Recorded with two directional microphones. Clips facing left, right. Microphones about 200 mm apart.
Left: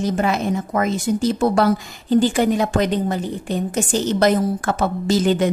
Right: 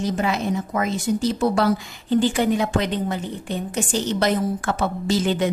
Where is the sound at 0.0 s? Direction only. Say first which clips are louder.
Left 3 dB; 50° left (ahead or behind).